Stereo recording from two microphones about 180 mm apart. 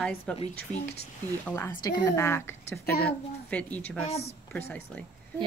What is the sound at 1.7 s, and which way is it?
Speech, 20° left (ahead or behind).